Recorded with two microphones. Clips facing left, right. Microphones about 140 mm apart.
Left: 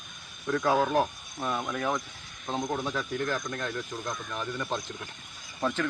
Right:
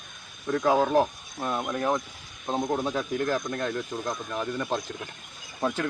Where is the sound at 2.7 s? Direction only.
35° right (ahead or behind); by 5.9 s 10° right (ahead or behind).